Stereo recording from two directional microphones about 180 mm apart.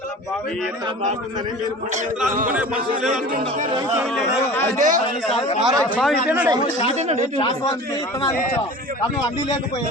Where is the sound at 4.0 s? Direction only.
Centre (ahead or behind).